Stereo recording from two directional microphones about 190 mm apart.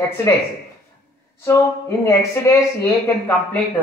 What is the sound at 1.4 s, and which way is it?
Speech, 15° left (ahead or behind).